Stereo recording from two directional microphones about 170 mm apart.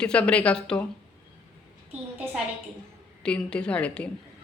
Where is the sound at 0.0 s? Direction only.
5° left (ahead or behind).